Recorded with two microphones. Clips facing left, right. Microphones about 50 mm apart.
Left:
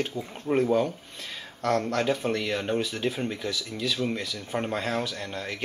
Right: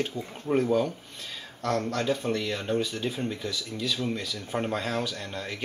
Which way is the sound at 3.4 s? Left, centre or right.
Centre.